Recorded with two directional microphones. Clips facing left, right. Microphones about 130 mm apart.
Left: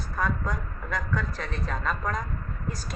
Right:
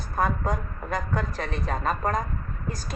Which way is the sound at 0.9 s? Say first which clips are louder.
Right 2 dB; 55° right (ahead or behind).